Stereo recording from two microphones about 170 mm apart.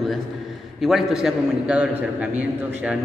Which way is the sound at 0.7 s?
Centre (ahead or behind).